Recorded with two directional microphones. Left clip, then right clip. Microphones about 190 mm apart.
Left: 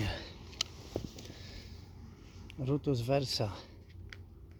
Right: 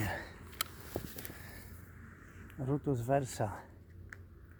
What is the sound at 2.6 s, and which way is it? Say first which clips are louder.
Speech: left 2 dB; 30° left (ahead or behind).